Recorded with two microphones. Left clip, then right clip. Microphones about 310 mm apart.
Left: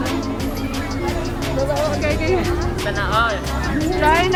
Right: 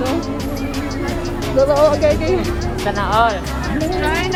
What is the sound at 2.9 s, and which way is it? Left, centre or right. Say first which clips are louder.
Music: right 4 dB; right.